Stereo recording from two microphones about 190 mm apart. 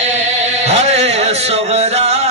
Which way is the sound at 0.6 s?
35° right (ahead or behind).